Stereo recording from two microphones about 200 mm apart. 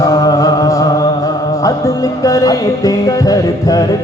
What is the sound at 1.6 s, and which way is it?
Music, 15° left (ahead or behind).